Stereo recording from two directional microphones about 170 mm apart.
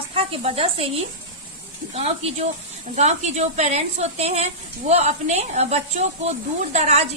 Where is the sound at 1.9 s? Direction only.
40° right (ahead or behind).